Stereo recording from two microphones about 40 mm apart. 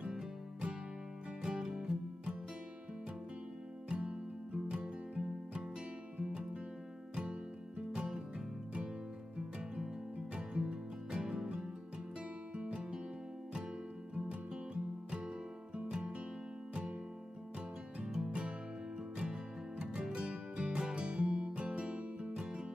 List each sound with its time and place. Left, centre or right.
1.4 s music: right
3.9 s music: right
7.9 s music: centre
10.3 s music: right
12.5 s music: right
14.7 s music: right
18.2 s music: right
19.9 s music: right